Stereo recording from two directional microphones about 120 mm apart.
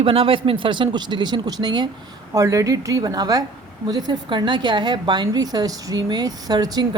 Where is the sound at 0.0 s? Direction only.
50° right (ahead or behind).